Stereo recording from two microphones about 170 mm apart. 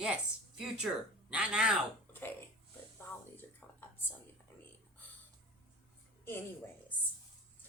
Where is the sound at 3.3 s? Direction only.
10° left (ahead or behind).